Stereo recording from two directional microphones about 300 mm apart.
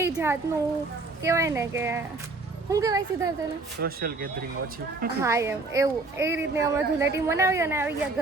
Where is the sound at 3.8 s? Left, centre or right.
Right.